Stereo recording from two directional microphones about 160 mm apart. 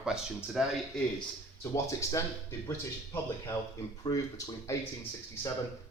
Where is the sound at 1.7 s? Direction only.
20° left (ahead or behind).